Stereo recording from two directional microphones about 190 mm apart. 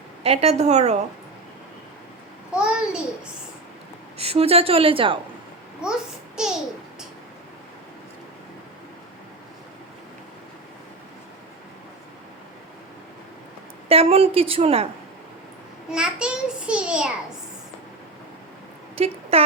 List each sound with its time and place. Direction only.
0.2 s a woman's voice: 35° right (ahead or behind)
2.5 s a sound: 5° right (ahead or behind)
4.2 s a woman's voice: 30° right (ahead or behind)
5.8 s a child's voice: 5° right (ahead or behind)
13.8 s a woman's voice: 30° right (ahead or behind)
15.9 s a child's voice: 5° right (ahead or behind)
18.9 s speech: 30° right (ahead or behind)